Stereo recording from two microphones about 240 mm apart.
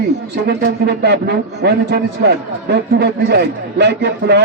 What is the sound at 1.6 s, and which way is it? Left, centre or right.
A man's voice, right.